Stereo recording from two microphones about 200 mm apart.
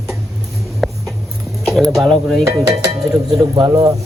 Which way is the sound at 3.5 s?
20° right (ahead or behind).